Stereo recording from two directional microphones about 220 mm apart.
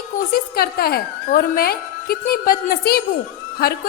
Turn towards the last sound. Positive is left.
turn(degrees=45)  # may be behind; listen again after turning